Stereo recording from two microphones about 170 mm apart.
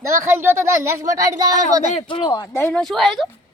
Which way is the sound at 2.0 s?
30° left (ahead or behind).